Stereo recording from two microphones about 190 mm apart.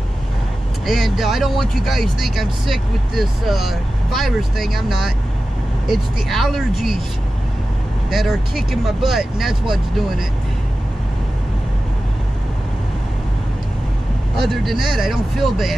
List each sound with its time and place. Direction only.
0.8 s speech: centre (ahead or behind)
8.1 s speech: centre (ahead or behind)
14.3 s speech: centre (ahead or behind)